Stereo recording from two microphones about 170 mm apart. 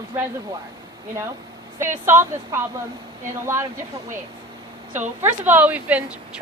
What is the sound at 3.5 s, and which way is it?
Speech, 15° right (ahead or behind).